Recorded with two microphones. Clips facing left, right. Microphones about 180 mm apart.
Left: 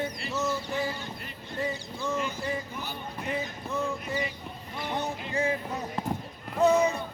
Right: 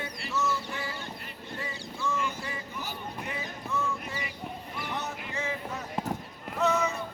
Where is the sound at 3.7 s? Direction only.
15° left (ahead or behind).